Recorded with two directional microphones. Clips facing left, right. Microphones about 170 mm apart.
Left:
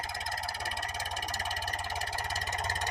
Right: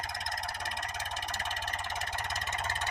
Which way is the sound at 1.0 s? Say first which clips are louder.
Left 1 dB; 10° left (ahead or behind).